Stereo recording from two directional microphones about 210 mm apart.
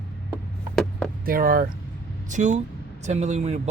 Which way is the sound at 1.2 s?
45° right (ahead or behind).